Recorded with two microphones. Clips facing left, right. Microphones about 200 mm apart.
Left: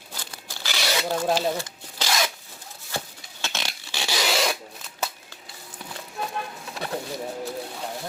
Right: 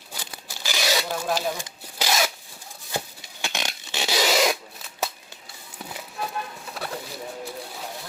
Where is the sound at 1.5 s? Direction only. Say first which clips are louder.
Left 3 dB; 15° right (ahead or behind).